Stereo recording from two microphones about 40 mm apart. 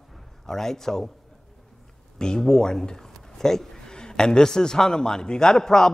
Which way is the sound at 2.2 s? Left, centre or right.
Centre.